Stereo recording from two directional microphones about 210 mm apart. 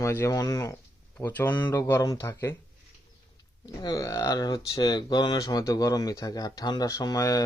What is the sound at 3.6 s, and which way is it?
Speech, 20° left (ahead or behind).